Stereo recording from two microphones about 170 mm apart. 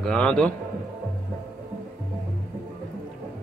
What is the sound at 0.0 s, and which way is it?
Speech, 5° left (ahead or behind).